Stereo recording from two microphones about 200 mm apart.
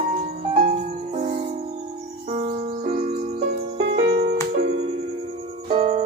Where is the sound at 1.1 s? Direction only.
35° right (ahead or behind).